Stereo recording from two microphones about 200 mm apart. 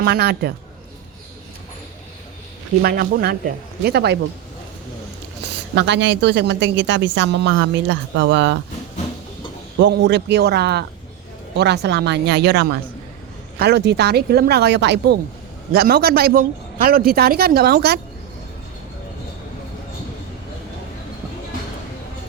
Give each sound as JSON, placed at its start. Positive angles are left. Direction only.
{"t": 0.0, "sound": "a man's voice", "side_deg": -55}
{"t": 2.8, "sound": "a man's voice", "side_deg": -50}
{"t": 5.7, "sound": "a woman's voice", "side_deg": -60}
{"t": 9.7, "sound": "a woman's voice", "side_deg": -60}